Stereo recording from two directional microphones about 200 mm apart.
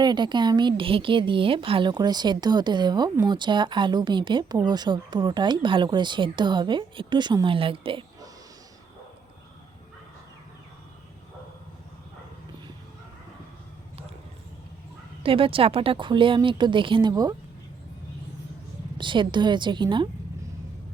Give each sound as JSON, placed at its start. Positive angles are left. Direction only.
{"t": 0.0, "sound": "speech", "side_deg": -20}
{"t": 15.2, "sound": "speech", "side_deg": -25}
{"t": 18.9, "sound": "speech", "side_deg": -25}